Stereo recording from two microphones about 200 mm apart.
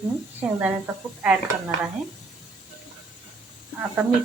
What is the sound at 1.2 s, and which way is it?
Speech, 10° right (ahead or behind).